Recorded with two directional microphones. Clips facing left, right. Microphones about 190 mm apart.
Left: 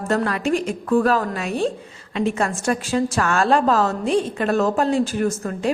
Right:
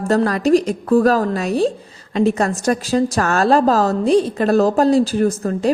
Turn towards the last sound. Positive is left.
turn(degrees=-35)  # may be behind; listen again after turning